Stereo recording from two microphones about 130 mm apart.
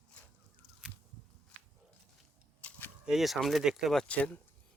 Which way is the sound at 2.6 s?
10° left (ahead or behind).